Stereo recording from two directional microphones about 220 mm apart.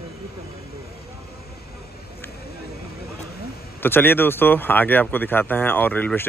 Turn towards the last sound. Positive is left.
turn(degrees=10)  # may be behind; listen again after turning